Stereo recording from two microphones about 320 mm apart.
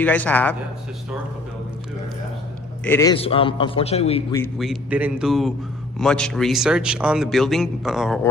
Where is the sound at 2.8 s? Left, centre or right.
Centre.